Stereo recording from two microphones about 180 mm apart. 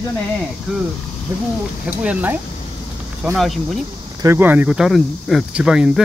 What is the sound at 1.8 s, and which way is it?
Speech, 5° right (ahead or behind).